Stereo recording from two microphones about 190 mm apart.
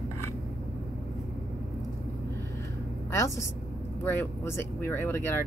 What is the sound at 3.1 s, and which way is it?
A woman's voice, 15° left (ahead or behind).